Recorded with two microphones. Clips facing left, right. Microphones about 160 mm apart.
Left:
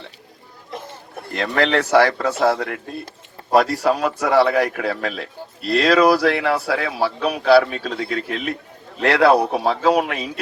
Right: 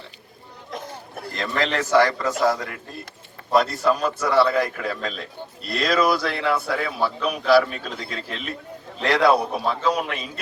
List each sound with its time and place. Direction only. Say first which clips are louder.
1.4 s a man's voice: left 5 dB; 65° left (ahead or behind)